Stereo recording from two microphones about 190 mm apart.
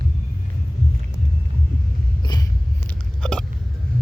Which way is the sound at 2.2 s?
20° left (ahead or behind).